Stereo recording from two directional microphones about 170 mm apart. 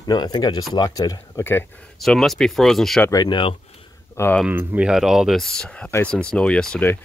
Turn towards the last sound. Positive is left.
turn(degrees=10)  # may be behind; listen again after turning